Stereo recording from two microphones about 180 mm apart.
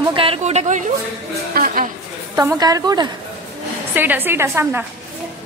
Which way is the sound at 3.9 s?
10° right (ahead or behind).